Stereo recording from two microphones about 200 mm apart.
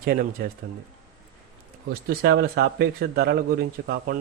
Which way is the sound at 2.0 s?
50° right (ahead or behind).